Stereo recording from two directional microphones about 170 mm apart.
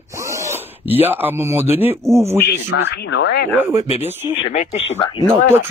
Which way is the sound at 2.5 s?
85° left.